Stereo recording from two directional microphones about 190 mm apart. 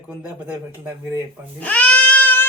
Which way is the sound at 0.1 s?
10° right (ahead or behind).